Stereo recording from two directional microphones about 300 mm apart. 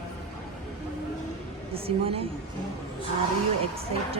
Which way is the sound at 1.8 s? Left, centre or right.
Centre.